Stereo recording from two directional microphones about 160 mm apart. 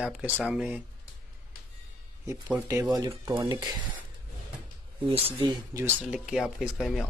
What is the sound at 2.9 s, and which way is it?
Speech, 20° right (ahead or behind).